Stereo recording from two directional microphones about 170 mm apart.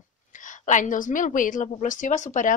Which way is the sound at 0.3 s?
50° left (ahead or behind).